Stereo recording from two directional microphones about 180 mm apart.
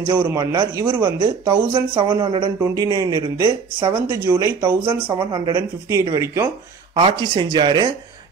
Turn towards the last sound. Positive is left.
turn(degrees=-25)  # may be behind; listen again after turning